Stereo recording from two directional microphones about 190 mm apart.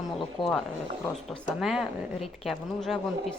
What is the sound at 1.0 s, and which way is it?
Speech, 5° left (ahead or behind).